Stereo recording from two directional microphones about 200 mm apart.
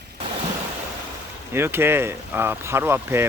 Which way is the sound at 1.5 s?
10° right (ahead or behind).